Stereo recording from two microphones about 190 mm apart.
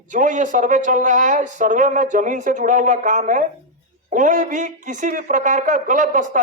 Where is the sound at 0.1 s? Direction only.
40° right (ahead or behind).